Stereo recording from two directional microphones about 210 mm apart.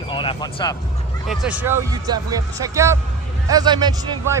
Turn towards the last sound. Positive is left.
turn(degrees=-20)  # may be behind; listen again after turning